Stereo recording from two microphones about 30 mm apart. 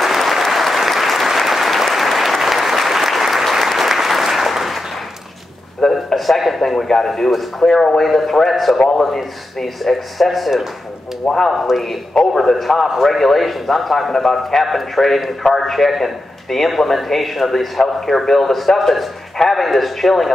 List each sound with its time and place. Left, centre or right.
0.0 s applause: centre
5.9 s a sound: centre
7.1 s a man's voice: centre
11.5 s a man's voice: centre
12.2 s a man's voice: left
12.5 s a man's voice: centre